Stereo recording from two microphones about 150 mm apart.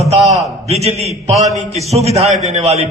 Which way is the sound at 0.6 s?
45° right (ahead or behind).